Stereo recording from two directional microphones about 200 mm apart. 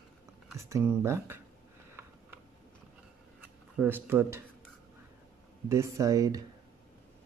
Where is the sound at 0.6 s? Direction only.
15° right (ahead or behind).